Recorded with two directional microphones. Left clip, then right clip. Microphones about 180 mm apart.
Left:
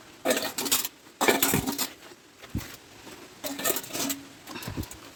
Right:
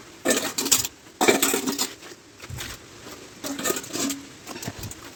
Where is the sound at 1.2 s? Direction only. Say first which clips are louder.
Right 4 dB; centre (ahead or behind).